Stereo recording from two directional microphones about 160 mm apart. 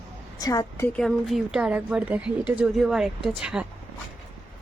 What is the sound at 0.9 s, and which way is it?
Speech, centre (ahead or behind).